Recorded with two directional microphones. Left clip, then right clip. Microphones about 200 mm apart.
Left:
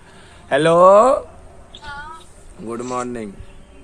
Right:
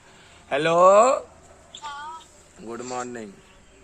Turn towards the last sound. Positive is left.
turn(degrees=10)  # may be behind; listen again after turning